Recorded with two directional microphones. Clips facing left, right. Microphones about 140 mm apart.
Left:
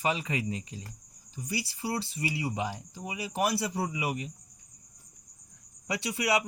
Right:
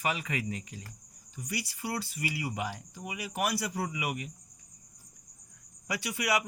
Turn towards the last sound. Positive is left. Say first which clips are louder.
# left 2 dB
turn(degrees=25)  # may be behind; listen again after turning